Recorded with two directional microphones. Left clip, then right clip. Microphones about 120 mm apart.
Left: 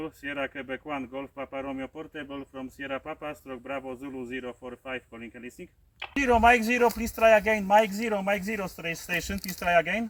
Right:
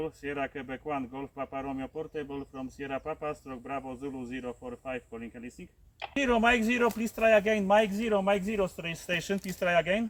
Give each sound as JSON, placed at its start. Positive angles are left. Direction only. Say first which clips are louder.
{"t": 0.0, "sound": "speech", "louder": "left 1 dB", "side_deg": -20}